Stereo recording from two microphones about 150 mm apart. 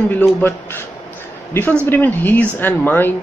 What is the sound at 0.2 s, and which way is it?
Speech, 15° left (ahead or behind).